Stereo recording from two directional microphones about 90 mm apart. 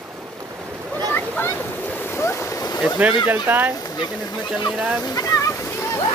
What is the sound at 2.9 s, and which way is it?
Speech, 15° right (ahead or behind).